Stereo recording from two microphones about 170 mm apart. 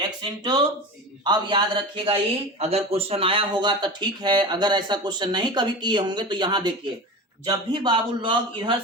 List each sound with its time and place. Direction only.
0.2 s speech: 25° right (ahead or behind)